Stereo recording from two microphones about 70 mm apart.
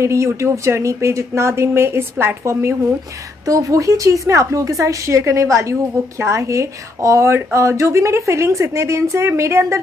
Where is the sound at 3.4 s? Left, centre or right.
Right.